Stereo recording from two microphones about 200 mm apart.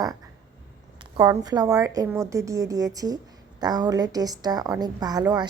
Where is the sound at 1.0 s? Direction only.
20° right (ahead or behind).